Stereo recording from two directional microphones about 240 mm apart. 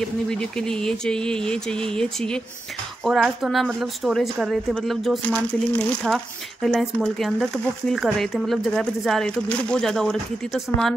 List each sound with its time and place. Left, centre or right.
0.3 s a woman's voice: centre